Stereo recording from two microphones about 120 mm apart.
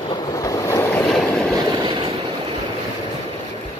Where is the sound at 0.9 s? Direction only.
5° left (ahead or behind).